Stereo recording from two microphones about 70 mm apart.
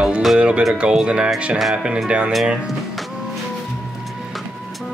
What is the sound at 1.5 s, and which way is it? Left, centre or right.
Speech, centre.